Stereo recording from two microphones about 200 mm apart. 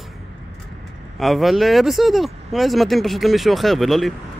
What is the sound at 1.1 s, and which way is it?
Speech, centre (ahead or behind).